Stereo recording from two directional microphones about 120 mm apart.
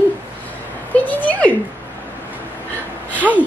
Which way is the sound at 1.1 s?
15° left (ahead or behind).